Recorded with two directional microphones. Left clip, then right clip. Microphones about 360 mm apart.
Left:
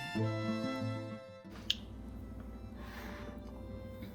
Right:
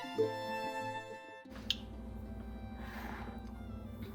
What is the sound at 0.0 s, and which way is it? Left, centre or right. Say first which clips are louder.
Music: right 3 dB; centre.